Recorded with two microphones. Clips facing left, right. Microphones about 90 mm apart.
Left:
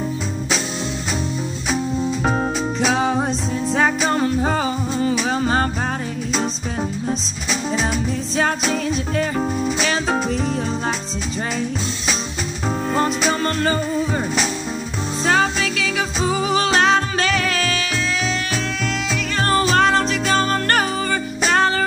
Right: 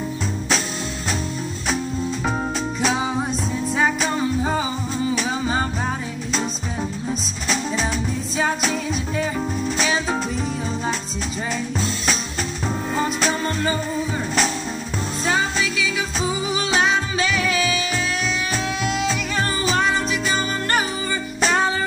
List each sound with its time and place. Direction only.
2.9 s music: 55° left (ahead or behind)
3.2 s music: 30° left (ahead or behind)
4.1 s music: 55° left (ahead or behind)
9.8 s music: 55° left (ahead or behind)
13.3 s music: 60° left (ahead or behind)
15.2 s music: 60° left (ahead or behind)
19.3 s music: 60° left (ahead or behind)